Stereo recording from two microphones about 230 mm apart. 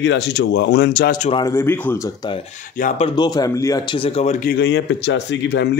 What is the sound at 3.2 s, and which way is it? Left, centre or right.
Speech, centre.